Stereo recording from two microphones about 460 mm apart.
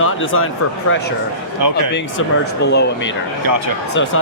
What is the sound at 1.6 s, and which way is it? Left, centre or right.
Speech, right.